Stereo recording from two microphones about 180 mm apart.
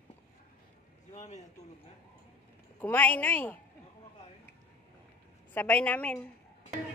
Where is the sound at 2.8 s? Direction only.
10° left (ahead or behind).